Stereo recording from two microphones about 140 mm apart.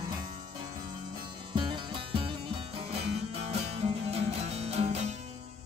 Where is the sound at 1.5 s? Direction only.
35° right (ahead or behind).